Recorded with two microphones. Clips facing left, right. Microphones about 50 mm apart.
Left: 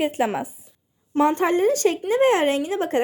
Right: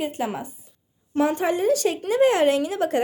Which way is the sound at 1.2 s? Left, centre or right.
Left.